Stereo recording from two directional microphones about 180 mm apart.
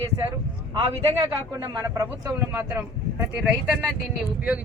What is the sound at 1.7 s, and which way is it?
Speech, 20° right (ahead or behind).